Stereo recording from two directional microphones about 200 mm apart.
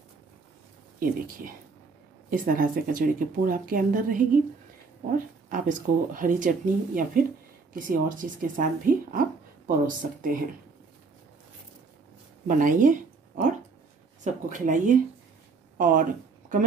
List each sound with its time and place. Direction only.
0.9 s speech: 45° right (ahead or behind)
12.4 s speech: 40° right (ahead or behind)